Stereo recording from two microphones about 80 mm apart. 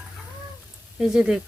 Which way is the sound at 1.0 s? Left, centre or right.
Centre.